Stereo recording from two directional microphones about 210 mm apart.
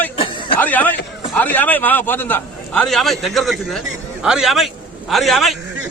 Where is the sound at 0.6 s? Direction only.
10° left (ahead or behind).